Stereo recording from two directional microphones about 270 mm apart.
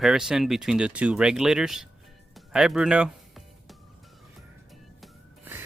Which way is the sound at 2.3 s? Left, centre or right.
Centre.